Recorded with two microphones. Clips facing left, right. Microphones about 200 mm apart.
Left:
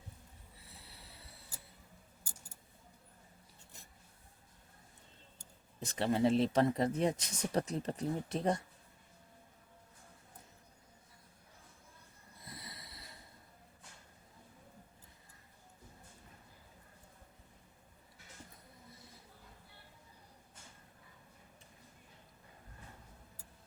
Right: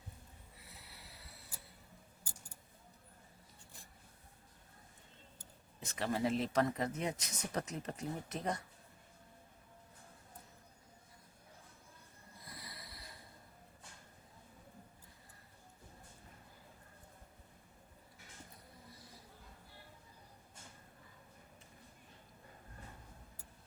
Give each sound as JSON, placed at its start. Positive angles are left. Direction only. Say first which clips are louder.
{"t": 0.7, "sound": "snort", "louder": "left 1 dB", "side_deg": 30}
{"t": 5.8, "sound": "speech", "louder": "left 5 dB", "side_deg": 35}
{"t": 12.5, "sound": "a sound", "louder": "left 2 dB", "side_deg": 25}